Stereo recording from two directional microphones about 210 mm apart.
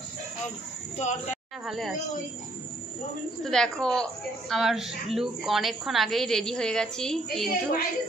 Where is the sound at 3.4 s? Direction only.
5° left (ahead or behind).